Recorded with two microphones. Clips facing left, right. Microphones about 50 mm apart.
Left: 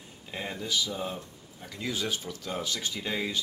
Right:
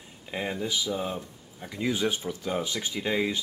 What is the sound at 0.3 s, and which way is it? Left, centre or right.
Speech, centre.